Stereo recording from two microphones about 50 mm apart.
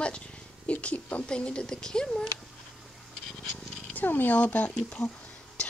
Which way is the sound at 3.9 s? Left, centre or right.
Left.